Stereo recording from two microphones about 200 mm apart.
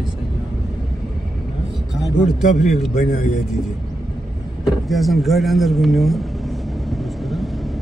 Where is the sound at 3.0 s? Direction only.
40° left (ahead or behind).